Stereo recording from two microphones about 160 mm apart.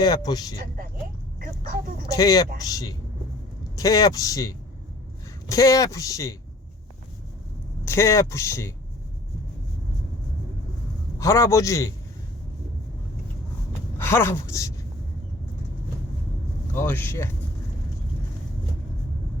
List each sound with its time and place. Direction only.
0.0 s speech: 25° left (ahead or behind)
2.1 s speech: 25° left (ahead or behind)
7.9 s speech: 20° left (ahead or behind)
11.2 s speech: 20° left (ahead or behind)
14.0 s speech: 15° left (ahead or behind)
16.7 s speech: 15° left (ahead or behind)